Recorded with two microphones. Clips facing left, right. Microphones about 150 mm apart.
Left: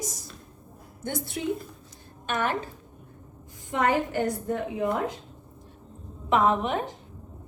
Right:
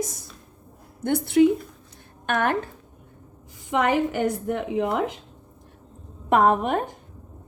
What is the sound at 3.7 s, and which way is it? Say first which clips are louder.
A woman's voice: right 3 dB; 90° right.